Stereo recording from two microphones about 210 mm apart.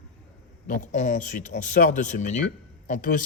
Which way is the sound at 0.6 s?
35° left (ahead or behind).